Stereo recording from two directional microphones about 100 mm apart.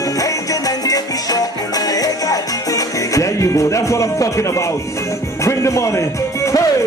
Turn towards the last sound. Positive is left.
turn(degrees=30)  # may be behind; listen again after turning